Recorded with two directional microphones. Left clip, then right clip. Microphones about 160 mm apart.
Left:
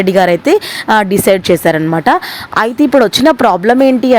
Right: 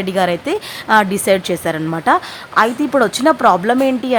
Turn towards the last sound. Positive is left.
turn(degrees=30)  # may be behind; listen again after turning